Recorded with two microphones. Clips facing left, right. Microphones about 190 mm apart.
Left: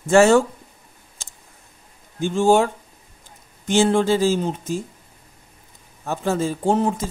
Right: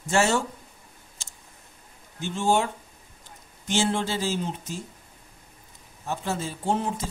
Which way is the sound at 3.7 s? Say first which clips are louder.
Left 9 dB; 50° left (ahead or behind).